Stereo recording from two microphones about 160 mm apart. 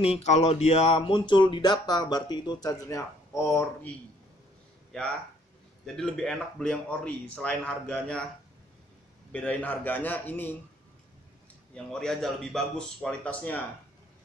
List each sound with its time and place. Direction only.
0.0 s speech: 40° left (ahead or behind); by 3.9 s 15° left (ahead or behind)
4.9 s speech: 5° left (ahead or behind)
9.3 s a man's voice: 10° left (ahead or behind)
11.7 s speech: 5° left (ahead or behind)